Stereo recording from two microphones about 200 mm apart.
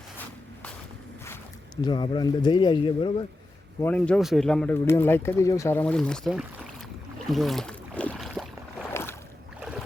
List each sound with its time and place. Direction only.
1.2 s speech: 15° left (ahead or behind)
3.8 s speech: 10° left (ahead or behind)
7.3 s boat: centre (ahead or behind)
8.9 s boat: 10° left (ahead or behind)
9.6 s boat: 5° right (ahead or behind)